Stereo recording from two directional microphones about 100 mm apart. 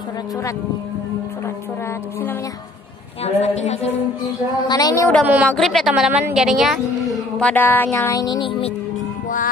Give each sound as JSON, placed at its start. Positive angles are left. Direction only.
{"t": 3.3, "sound": "a woman's voice", "side_deg": 90}
{"t": 4.6, "sound": "a woman's voice", "side_deg": 40}
{"t": 5.2, "sound": "a woman's voice", "side_deg": -15}
{"t": 5.6, "sound": "a woman's voice", "side_deg": 0}
{"t": 7.3, "sound": "mantra", "side_deg": 15}
{"t": 8.1, "sound": "a woman's voice", "side_deg": 40}
{"t": 8.4, "sound": "speech", "side_deg": 65}